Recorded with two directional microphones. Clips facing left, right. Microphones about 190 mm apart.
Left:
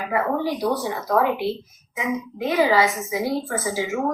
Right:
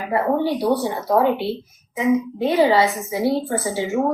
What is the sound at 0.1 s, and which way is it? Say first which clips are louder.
A woman's voice: right 4 dB; 30° right (ahead or behind).